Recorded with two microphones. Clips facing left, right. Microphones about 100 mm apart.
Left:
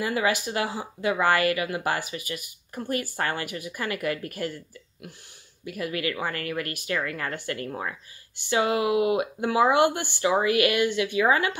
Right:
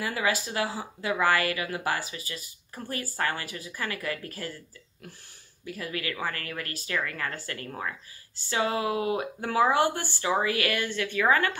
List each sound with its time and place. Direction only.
0.0 s speech: 20° left (ahead or behind)
5.8 s speech: 20° left (ahead or behind)